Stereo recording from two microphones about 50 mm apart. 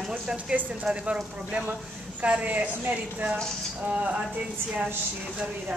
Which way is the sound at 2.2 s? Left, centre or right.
Right.